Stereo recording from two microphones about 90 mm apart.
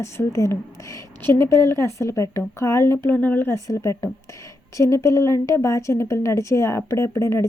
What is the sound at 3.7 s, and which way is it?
Speech, 35° left (ahead or behind).